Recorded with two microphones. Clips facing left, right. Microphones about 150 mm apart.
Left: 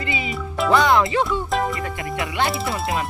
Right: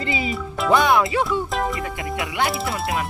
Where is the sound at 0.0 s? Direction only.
30° right (ahead or behind).